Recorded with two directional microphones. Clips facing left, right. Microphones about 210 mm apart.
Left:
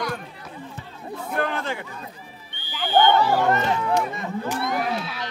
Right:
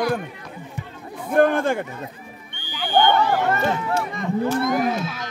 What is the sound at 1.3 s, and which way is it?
Speech, 50° right (ahead or behind).